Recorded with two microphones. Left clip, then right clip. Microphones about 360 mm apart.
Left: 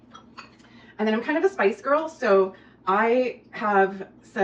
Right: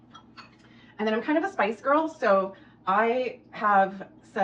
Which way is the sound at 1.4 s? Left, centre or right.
Centre.